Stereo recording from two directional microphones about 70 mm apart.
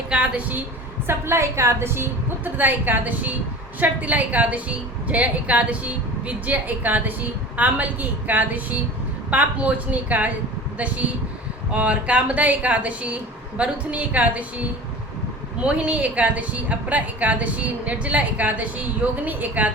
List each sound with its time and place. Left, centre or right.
0.1 s a woman's voice: centre
1.0 s a woman's voice: right
15.6 s a woman's voice: centre